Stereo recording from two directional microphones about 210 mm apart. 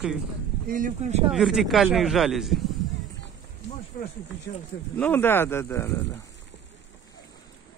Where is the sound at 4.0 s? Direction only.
40° left (ahead or behind).